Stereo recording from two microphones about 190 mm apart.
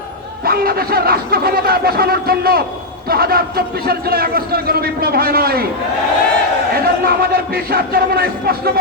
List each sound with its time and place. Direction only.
0.4 s a man's voice: 55° right (ahead or behind)
6.8 s a man's voice: 55° right (ahead or behind)